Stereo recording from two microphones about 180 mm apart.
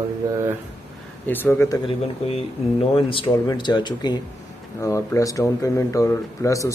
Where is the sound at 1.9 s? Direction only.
35° left (ahead or behind); by 6.7 s 15° left (ahead or behind).